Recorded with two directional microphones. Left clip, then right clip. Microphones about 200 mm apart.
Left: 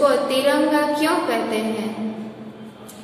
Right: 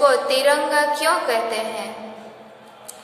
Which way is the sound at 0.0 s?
30° right (ahead or behind).